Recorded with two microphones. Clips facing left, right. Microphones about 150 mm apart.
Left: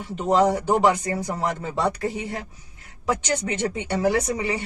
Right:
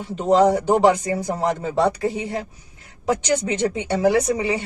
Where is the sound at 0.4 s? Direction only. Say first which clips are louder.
Right 4 dB; 50° right (ahead or behind).